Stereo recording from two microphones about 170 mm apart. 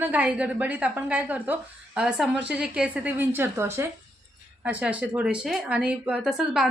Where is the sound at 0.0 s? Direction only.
10° right (ahead or behind).